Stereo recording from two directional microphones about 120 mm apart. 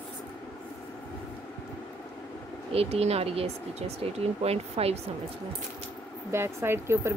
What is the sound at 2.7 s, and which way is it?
Speech, 55° right (ahead or behind).